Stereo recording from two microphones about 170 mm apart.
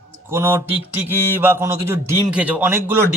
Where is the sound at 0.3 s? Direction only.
15° right (ahead or behind).